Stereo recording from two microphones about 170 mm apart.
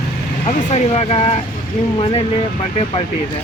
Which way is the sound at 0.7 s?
40° left (ahead or behind).